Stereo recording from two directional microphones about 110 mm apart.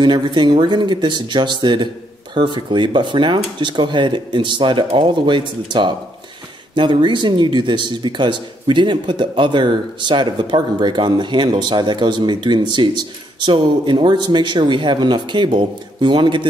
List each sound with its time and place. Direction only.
0.0 s speech: 45° right (ahead or behind)